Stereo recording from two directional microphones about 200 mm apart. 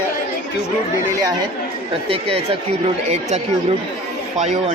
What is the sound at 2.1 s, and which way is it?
Speech, 30° right (ahead or behind).